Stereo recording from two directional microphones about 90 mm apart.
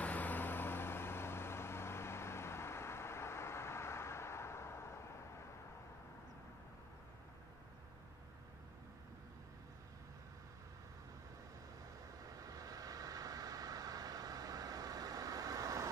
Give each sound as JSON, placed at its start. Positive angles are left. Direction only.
{"t": 0.0, "sound": "vehicle", "side_deg": 20}
{"t": 12.2, "sound": "vehicle", "side_deg": -40}